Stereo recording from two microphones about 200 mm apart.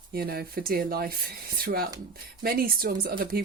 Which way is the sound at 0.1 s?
50° right (ahead or behind).